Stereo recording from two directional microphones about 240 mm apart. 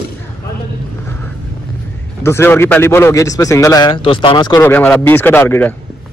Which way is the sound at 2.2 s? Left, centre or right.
Centre.